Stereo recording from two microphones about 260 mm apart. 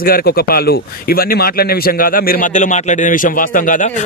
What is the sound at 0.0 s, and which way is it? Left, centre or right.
Speech, left.